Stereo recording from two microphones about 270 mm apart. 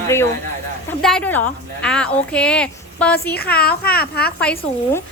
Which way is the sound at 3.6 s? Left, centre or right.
Left.